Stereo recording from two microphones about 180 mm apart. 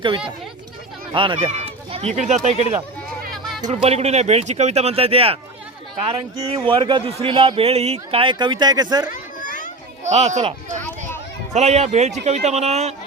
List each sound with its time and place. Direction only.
1.1 s speech: 30° right (ahead or behind)
3.3 s a sound: centre (ahead or behind)
3.8 s a man's voice: 35° right (ahead or behind)
9.4 s children playing: 45° left (ahead or behind)
10.0 s speech: 40° right (ahead or behind)